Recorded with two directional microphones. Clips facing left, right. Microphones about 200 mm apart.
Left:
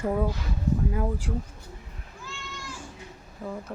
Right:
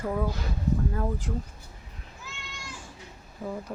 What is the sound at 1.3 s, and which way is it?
Speech, centre (ahead or behind).